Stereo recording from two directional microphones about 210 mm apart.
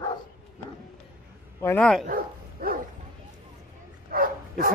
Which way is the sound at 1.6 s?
5° left (ahead or behind).